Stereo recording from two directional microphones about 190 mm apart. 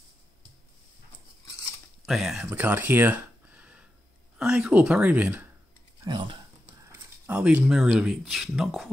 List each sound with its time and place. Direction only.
2.0 s speech: centre (ahead or behind)
6.0 s speech: 25° right (ahead or behind)
6.8 s speech: 10° right (ahead or behind)